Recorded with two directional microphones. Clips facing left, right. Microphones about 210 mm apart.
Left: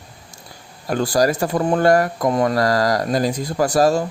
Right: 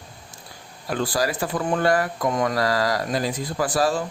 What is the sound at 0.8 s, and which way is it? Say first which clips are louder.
Speech: left 6 dB; 45° left (ahead or behind).